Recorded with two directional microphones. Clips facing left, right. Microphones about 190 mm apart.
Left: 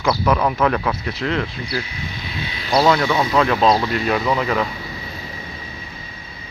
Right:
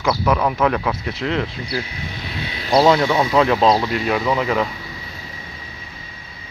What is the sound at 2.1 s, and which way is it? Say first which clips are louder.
Vehicle: right 1 dB; 60° right (ahead or behind).